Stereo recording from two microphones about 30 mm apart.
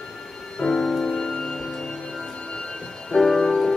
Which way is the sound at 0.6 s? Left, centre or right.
Centre.